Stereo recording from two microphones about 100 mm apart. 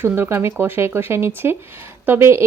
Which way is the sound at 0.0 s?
20° right (ahead or behind).